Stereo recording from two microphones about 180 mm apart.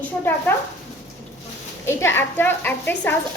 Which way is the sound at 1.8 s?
15° left (ahead or behind).